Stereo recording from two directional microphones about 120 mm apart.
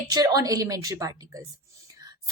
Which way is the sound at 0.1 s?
30° right (ahead or behind).